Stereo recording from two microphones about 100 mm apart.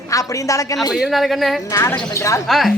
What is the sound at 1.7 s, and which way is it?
Speech, 30° left (ahead or behind).